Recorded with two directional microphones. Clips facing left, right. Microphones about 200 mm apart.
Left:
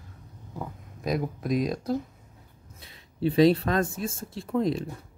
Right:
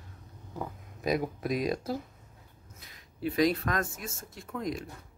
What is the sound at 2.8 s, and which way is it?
Speech, 30° left (ahead or behind).